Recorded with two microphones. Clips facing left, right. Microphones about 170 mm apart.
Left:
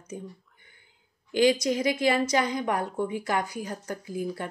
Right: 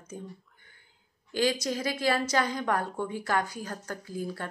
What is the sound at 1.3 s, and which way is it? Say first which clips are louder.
A woman's voice: left 6 dB; 15° left (ahead or behind).